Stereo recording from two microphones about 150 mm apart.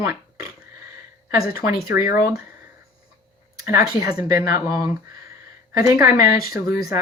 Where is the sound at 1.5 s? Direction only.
80° left.